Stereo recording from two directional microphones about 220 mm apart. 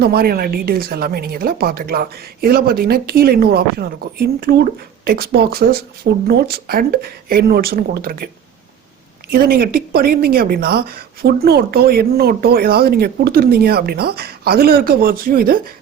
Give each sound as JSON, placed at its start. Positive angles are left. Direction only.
{"t": 0.0, "sound": "speech", "side_deg": -45}
{"t": 9.3, "sound": "speech", "side_deg": -45}